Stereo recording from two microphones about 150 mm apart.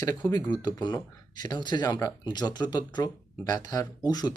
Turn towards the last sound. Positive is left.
turn(degrees=25)  # may be behind; listen again after turning